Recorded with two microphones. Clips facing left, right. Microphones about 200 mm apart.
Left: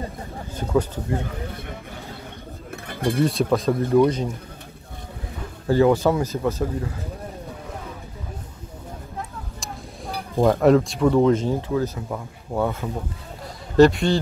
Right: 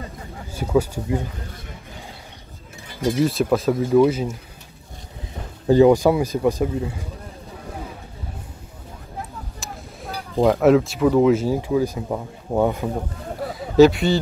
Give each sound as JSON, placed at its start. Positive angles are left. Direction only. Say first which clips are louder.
{"t": 0.6, "sound": "speech", "louder": "right 2 dB", "side_deg": -10}
{"t": 2.7, "sound": "a sound", "louder": "right 1 dB", "side_deg": 55}
{"t": 3.2, "sound": "speech", "louder": "right 1 dB", "side_deg": 0}
{"t": 5.7, "sound": "speech", "louder": "right 4 dB", "side_deg": -15}
{"t": 10.4, "sound": "speech", "louder": "right 1 dB", "side_deg": 0}
{"t": 13.5, "sound": "a sound", "louder": "right 2 dB", "side_deg": 0}